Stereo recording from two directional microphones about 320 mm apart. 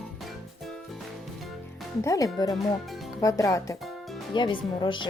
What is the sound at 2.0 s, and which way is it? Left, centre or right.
Speech, centre.